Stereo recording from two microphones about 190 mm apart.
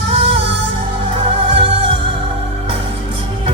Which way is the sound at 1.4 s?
30° right (ahead or behind).